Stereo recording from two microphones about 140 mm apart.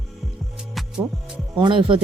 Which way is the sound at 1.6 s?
35° right (ahead or behind).